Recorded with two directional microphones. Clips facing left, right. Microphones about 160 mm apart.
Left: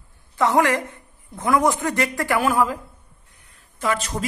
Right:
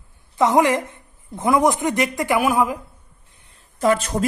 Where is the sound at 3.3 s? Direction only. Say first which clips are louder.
Right 1 dB; 25° right (ahead or behind).